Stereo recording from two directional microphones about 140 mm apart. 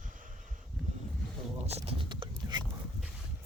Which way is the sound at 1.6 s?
45° right (ahead or behind).